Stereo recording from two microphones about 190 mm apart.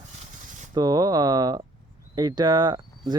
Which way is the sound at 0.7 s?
20° right (ahead or behind).